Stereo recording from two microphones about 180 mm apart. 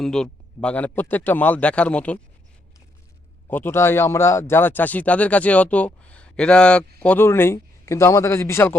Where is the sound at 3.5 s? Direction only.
10° left (ahead or behind).